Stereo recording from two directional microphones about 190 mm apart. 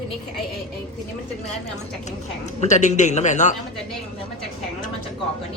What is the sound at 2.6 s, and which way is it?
Speech, 40° left (ahead or behind).